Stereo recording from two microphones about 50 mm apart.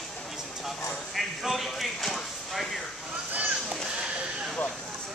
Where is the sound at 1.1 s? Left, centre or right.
Centre.